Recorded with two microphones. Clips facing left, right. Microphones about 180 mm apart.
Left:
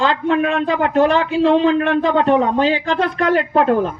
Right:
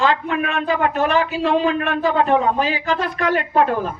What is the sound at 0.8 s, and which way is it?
Speech, 30° left (ahead or behind).